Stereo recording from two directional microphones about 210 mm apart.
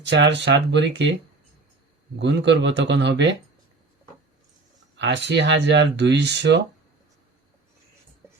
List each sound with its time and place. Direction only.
0.0 s speech: 55° right (ahead or behind)
2.1 s speech: 55° right (ahead or behind)
4.9 s speech: 55° right (ahead or behind)
8.2 s music: 10° right (ahead or behind)